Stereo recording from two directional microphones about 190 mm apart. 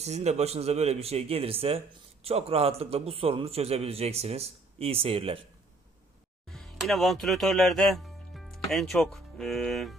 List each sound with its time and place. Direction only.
0.0 s a man's voice: 35° right (ahead or behind)
6.5 s speech: centre (ahead or behind)